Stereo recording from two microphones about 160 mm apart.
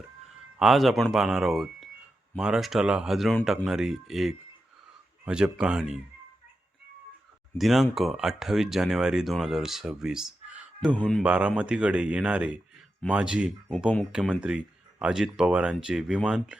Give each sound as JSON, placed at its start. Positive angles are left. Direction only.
{"t": 0.6, "sound": "speech", "side_deg": 0}
{"t": 7.6, "sound": "speech", "side_deg": 0}
{"t": 10.8, "sound": "speech", "side_deg": 5}
{"t": 11.2, "sound": "speech", "side_deg": -5}